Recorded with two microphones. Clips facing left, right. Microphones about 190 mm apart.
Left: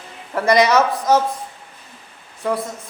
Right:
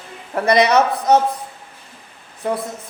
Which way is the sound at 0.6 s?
60° right (ahead or behind).